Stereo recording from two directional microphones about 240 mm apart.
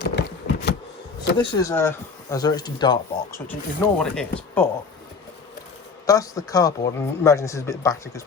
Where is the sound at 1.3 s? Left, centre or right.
Centre.